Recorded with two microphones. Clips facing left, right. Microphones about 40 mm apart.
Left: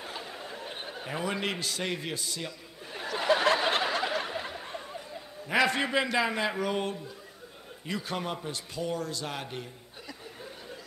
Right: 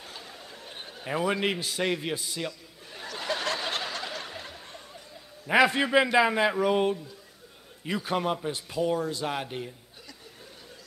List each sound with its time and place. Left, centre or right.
0.0 s a sound: centre
1.0 s a man's voice: centre
2.9 s snicker: centre
5.7 s a man's voice: centre